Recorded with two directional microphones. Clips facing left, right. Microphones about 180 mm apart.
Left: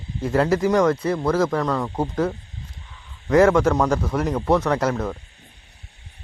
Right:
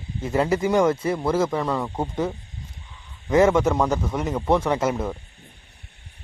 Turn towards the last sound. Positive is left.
turn(degrees=-10)  # may be behind; listen again after turning